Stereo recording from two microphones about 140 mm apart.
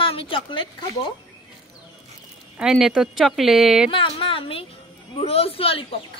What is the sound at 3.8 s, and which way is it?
A woman's voice, 40° left (ahead or behind).